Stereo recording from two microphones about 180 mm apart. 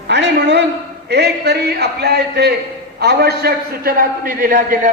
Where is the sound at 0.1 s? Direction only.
75° right (ahead or behind).